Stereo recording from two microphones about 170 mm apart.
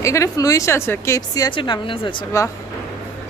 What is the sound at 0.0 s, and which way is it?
A woman's voice, 20° left (ahead or behind).